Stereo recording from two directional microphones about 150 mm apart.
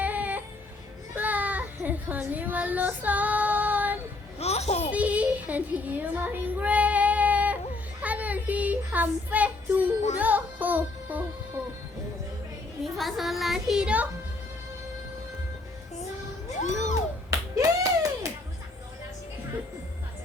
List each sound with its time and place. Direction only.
0.0 s music: 10° right (ahead or behind)
1.1 s a sound: 10° right (ahead or behind)
4.4 s music: 45° left (ahead or behind)
4.9 s child singing: 10° right (ahead or behind)
10.2 s music: 10° right (ahead or behind)
12.8 s a child's voice: centre (ahead or behind)
17.3 s a sound: 20° right (ahead or behind)